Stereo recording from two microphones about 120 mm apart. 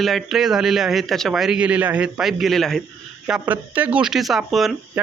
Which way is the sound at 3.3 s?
15° right (ahead or behind).